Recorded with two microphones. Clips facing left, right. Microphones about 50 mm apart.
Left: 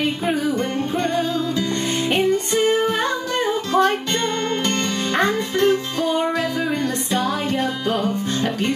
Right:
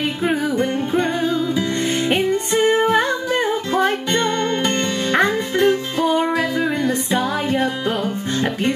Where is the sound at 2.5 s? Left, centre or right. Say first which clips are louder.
Right 3 dB; centre.